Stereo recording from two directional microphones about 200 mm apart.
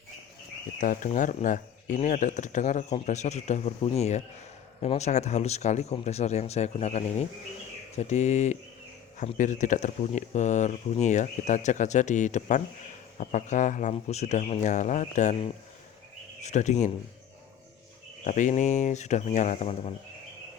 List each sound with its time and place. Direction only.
0.8 s speech: 40° left (ahead or behind)
16.4 s speech: 35° left (ahead or behind)
18.3 s speech: 40° left (ahead or behind)